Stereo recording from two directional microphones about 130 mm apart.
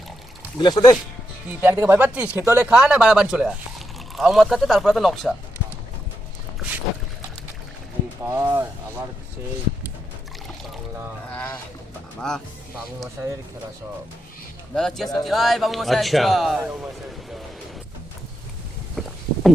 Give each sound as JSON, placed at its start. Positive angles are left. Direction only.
{"t": 0.6, "sound": "speech", "side_deg": 30}
{"t": 1.5, "sound": "speech", "side_deg": -15}
{"t": 2.6, "sound": "speech", "side_deg": -5}
{"t": 8.2, "sound": "speech", "side_deg": -20}
{"t": 11.3, "sound": "speech", "side_deg": 10}
{"t": 14.8, "sound": "speech", "side_deg": 5}
{"t": 18.9, "sound": "a sound", "side_deg": 0}